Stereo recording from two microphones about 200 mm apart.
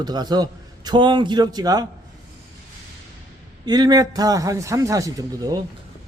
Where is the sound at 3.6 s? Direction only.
20° right (ahead or behind).